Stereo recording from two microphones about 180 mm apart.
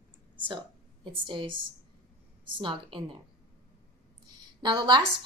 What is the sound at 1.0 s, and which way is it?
Speech, 25° right (ahead or behind).